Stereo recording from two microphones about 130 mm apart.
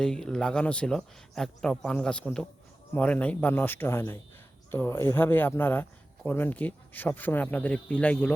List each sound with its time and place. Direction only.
0.0 s speech: 5° left (ahead or behind)